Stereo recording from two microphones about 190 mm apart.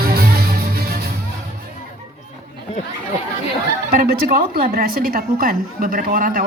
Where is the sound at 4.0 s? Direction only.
50° right (ahead or behind).